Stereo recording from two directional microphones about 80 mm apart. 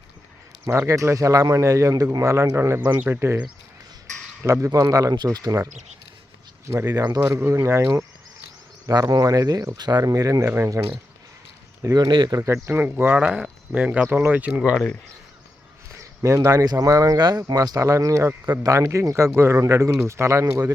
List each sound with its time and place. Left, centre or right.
0.6 s a man's voice: right
4.4 s speech: right
5.1 s speech: right
6.8 s speech: right
7.2 s speech: right
7.5 s a man's voice: right
8.9 s speech: right
11.8 s speech: right
12.0 s speech: right
12.4 s a man's voice: right
12.6 s speech: right
13.1 s speech: centre
16.0 s a man's voice: right